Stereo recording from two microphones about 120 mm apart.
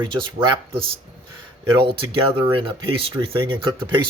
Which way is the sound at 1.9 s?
45° right (ahead or behind).